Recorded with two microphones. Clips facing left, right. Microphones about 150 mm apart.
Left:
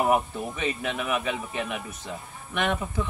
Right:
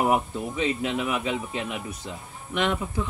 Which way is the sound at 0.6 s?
20° right (ahead or behind).